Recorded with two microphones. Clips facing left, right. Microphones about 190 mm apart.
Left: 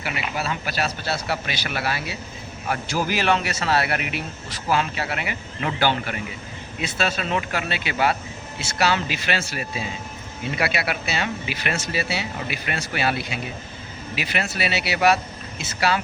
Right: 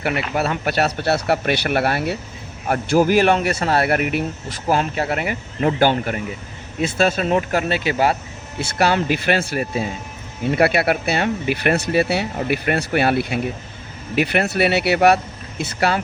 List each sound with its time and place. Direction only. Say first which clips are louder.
0.0 s speech: right 7 dB; 60° right (ahead or behind); by 8.1 s 40° right (ahead or behind)
8.5 s speech: right 4 dB; 50° right (ahead or behind)